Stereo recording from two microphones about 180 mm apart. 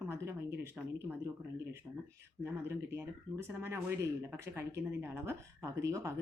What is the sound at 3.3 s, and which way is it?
A woman's voice, 15° right (ahead or behind).